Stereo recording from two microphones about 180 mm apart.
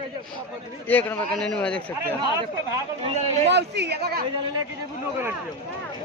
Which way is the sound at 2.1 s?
20° right (ahead or behind).